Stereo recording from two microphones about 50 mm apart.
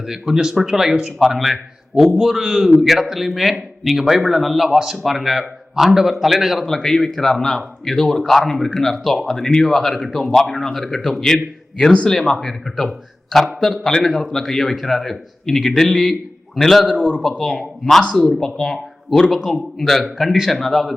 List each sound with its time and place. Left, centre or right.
0.0 s a man's voice: centre
6.7 s a man's voice: centre
16.9 s a man's voice: left
17.4 s a man's voice: centre